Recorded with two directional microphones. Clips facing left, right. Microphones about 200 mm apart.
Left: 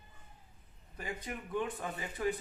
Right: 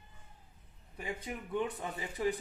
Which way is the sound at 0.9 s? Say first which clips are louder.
Right 1 dB; 5° right (ahead or behind).